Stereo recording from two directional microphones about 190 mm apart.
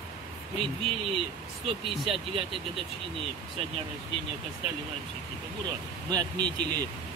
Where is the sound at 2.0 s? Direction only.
30° right (ahead or behind).